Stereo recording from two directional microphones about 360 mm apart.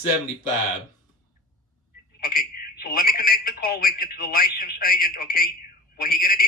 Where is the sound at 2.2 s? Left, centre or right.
Left.